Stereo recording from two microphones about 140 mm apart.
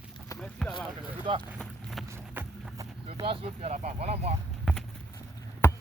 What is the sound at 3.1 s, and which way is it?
Vehicle, 40° right (ahead or behind).